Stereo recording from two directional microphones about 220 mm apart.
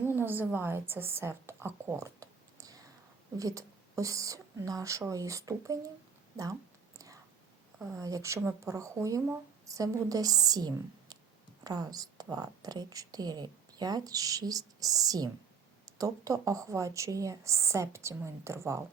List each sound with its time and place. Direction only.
0.0 s a woman's voice: 10° right (ahead or behind)
7.8 s a woman's voice: 15° right (ahead or behind)